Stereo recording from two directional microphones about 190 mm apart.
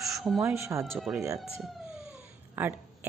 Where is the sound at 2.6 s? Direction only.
10° right (ahead or behind).